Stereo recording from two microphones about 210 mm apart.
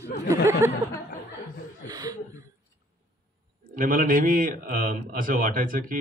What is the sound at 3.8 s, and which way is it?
Speech, 40° right (ahead or behind).